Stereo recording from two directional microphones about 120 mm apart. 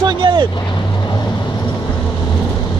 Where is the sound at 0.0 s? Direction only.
40° right (ahead or behind).